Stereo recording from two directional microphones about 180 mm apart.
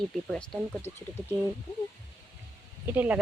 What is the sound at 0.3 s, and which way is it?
Speech, 5° left (ahead or behind).